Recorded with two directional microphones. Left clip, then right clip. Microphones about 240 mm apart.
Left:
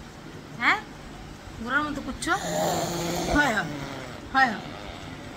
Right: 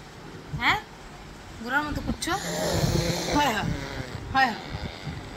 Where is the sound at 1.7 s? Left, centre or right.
Centre.